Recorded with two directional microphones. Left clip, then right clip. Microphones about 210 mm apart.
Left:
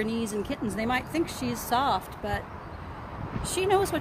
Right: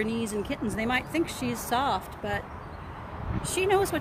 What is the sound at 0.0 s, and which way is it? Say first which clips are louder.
Speech: even; 5° right (ahead or behind).